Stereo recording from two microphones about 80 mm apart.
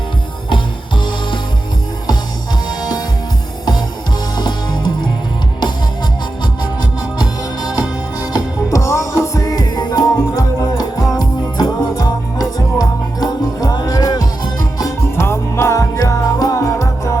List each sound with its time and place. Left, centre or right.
2.6 s music: left
4.4 s music: left
7.2 s music: left
8.3 s music: left
15.1 s music: left
16.0 s music: left